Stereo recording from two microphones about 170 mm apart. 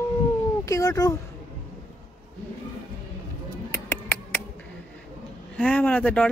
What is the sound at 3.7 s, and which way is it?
Music, 15° left (ahead or behind).